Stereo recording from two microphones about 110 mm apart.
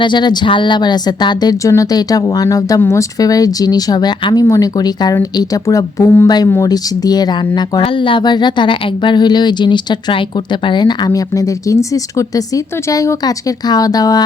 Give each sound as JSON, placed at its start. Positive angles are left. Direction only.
{"t": 0.0, "sound": "speech", "side_deg": 45}
{"t": 6.2, "sound": "speech", "side_deg": 35}
{"t": 7.8, "sound": "speech", "side_deg": 50}